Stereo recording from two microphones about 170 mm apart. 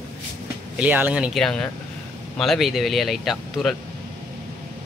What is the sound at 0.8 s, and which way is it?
Speech, 10° right (ahead or behind).